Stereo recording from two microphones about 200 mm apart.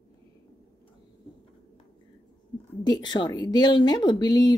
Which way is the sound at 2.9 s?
20° left (ahead or behind).